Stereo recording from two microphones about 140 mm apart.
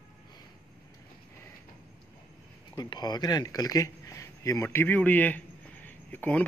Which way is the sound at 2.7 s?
30° left (ahead or behind).